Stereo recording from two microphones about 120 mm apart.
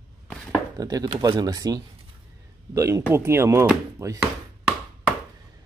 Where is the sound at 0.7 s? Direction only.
30° right (ahead or behind).